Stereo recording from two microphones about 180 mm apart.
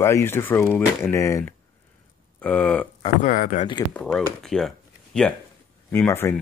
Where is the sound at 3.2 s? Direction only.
50° left (ahead or behind).